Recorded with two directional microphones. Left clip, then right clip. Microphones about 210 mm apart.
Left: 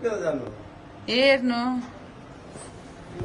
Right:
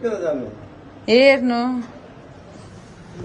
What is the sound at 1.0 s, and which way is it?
Speech, 20° right (ahead or behind).